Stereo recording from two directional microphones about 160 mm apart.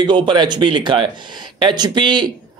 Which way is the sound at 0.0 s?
30° right (ahead or behind).